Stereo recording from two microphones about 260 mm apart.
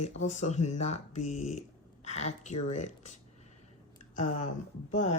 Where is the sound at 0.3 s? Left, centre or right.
Left.